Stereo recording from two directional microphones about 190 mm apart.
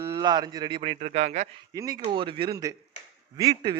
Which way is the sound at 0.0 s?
20° right (ahead or behind).